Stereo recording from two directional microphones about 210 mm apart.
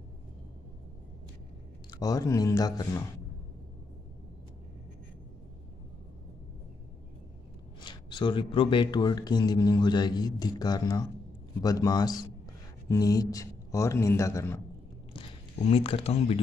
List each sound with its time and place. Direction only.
1.9 s speech: 15° left (ahead or behind)
7.8 s speech: 20° left (ahead or behind)
15.1 s speech: 25° left (ahead or behind)